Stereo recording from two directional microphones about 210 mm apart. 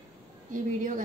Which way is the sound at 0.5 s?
35° right (ahead or behind).